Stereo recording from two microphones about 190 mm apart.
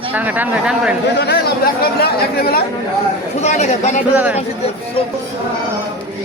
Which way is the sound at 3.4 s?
40° left (ahead or behind).